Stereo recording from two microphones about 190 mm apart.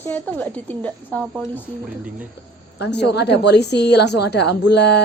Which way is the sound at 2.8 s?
65° left (ahead or behind).